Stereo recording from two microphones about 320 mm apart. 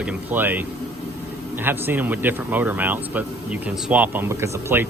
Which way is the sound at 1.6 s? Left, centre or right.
Centre.